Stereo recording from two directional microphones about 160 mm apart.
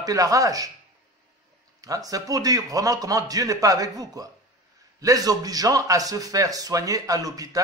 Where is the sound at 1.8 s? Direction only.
20° right (ahead or behind).